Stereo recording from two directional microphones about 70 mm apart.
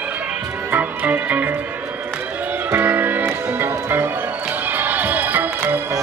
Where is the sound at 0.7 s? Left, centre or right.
Right.